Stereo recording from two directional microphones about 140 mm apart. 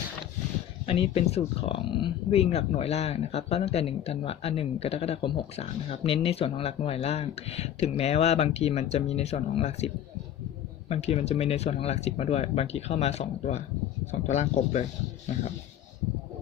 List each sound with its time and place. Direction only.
0.9 s speech: 40° left (ahead or behind)